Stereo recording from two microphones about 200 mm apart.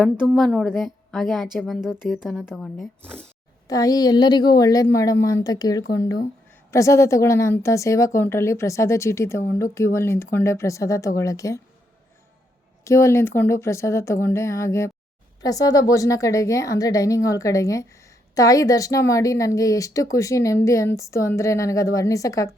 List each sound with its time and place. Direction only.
0.0 s a woman's voice: centre (ahead or behind)
3.7 s a woman's voice: 20° left (ahead or behind)
12.8 s a woman's voice: 15° left (ahead or behind)